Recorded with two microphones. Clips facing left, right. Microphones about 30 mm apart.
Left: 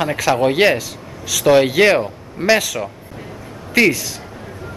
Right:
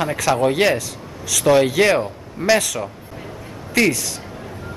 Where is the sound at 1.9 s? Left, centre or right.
Centre.